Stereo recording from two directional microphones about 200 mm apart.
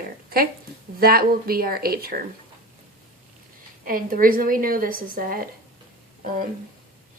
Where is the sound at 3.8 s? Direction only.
45° right (ahead or behind).